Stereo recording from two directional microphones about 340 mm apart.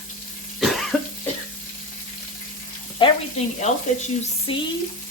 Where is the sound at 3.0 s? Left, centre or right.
Centre.